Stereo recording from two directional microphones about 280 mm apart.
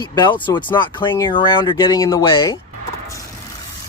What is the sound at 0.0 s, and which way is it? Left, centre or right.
Speech, centre.